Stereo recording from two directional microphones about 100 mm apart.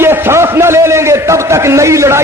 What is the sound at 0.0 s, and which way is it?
A man's voice, 25° right (ahead or behind).